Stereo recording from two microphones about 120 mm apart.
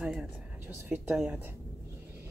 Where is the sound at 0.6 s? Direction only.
15° right (ahead or behind).